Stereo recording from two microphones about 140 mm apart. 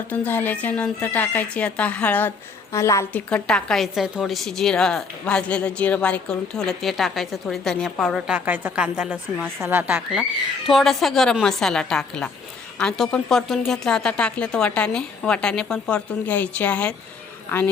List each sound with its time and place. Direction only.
0.1 s a woman's voice: 15° left (ahead or behind)
3.1 s a woman's voice: 10° left (ahead or behind)